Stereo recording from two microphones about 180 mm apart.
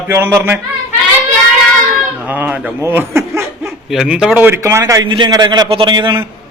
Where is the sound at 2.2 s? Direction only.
10° right (ahead or behind).